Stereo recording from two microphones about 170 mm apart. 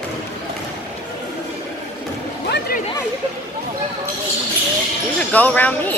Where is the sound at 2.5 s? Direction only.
60° left (ahead or behind).